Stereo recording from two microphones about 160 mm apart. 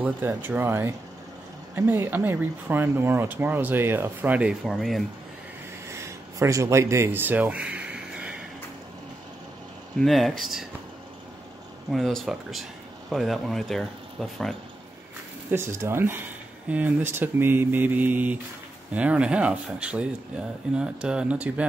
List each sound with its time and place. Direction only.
0.0 s speech: 10° right (ahead or behind)
5.9 s a sound: 20° right (ahead or behind)
9.9 s speech: centre (ahead or behind)
11.9 s speech: centre (ahead or behind)
15.5 s speech: 15° right (ahead or behind)